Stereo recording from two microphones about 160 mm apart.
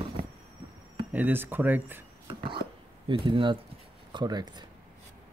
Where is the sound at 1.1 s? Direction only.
10° right (ahead or behind).